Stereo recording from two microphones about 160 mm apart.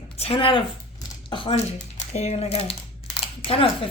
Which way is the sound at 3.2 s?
35° left (ahead or behind).